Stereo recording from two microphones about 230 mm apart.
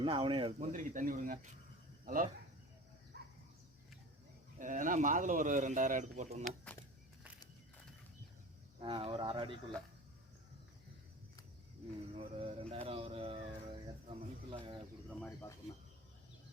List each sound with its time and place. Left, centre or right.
0.0 s speech: right
0.6 s a man's voice: right
4.5 s a man's voice: right
8.8 s speech: right
12.1 s music: right
15.2 s speech: centre